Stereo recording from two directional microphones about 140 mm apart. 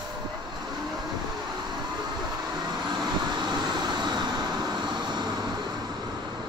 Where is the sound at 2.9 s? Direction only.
30° right (ahead or behind).